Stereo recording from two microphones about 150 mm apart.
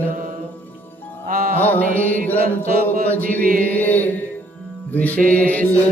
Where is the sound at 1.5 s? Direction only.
10° left (ahead or behind).